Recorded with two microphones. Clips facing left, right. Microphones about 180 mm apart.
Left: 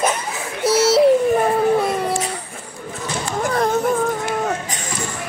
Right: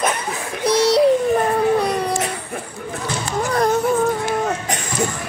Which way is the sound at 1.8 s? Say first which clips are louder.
Even; 5° left (ahead or behind).